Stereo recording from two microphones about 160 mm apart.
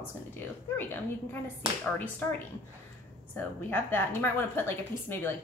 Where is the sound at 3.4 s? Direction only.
10° left (ahead or behind).